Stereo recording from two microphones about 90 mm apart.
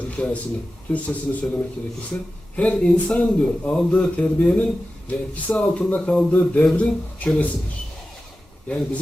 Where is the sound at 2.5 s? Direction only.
15° left (ahead or behind).